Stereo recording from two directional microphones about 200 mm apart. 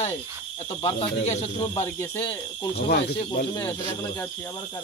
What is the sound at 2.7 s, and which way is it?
Speech, 50° left (ahead or behind).